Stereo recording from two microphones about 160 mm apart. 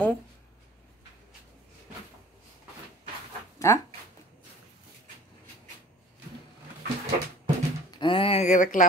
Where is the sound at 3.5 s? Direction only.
20° left (ahead or behind).